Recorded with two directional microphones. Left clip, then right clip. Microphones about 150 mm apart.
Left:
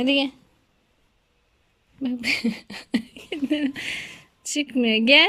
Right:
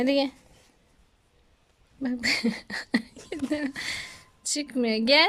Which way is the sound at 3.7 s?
35° right (ahead or behind).